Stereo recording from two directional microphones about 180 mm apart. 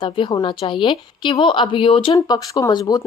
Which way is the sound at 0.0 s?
25° left (ahead or behind).